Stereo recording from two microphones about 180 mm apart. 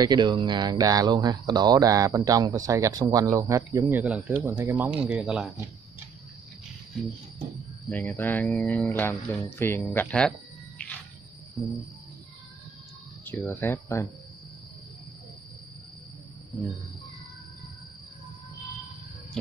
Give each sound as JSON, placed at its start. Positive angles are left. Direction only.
{"t": 0.0, "sound": "speech", "side_deg": -25}
{"t": 7.9, "sound": "speech", "side_deg": 10}
{"t": 13.2, "sound": "speech", "side_deg": 10}